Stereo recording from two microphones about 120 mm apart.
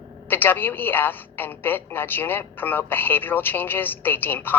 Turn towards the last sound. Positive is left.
turn(degrees=15)  # may be behind; listen again after turning